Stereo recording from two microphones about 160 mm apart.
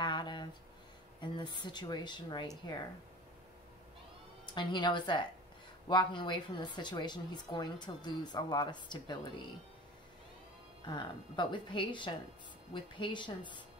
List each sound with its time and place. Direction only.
0.0 s a sound: 30° left (ahead or behind)
1.2 s a woman's voice: 30° left (ahead or behind)
4.6 s a woman's voice: 30° left (ahead or behind)
10.9 s a woman's voice: 30° left (ahead or behind)